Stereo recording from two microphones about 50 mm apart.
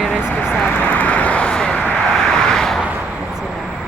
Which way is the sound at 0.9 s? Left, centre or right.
Left.